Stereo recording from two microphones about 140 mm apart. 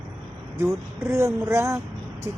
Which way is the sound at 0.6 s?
20° right (ahead or behind).